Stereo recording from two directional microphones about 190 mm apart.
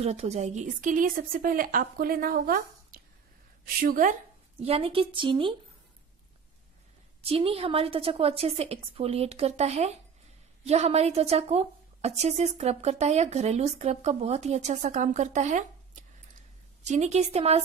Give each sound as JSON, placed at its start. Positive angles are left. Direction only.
{"t": 0.0, "sound": "a woman's voice", "side_deg": -35}
{"t": 7.2, "sound": "a woman's voice", "side_deg": -30}